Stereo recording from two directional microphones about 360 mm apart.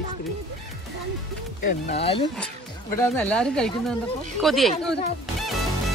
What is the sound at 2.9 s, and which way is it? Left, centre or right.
Speech, centre.